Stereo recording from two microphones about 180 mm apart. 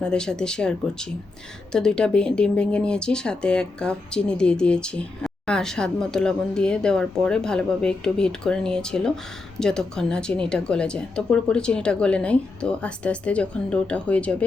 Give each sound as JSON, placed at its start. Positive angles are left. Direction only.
{"t": 0.0, "sound": "speech", "side_deg": 5}